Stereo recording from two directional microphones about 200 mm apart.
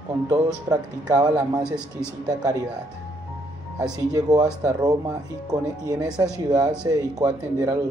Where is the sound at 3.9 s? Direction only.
20° right (ahead or behind).